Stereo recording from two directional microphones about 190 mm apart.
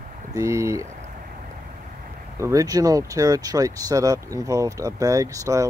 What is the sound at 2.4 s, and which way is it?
Speech, 15° right (ahead or behind).